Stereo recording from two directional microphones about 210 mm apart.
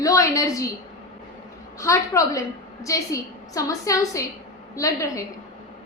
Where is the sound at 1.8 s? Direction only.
15° left (ahead or behind).